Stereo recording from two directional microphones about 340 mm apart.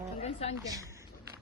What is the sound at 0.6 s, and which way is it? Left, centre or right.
Speech, centre.